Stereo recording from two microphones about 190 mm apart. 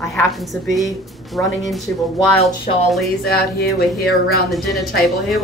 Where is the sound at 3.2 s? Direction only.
55° left (ahead or behind).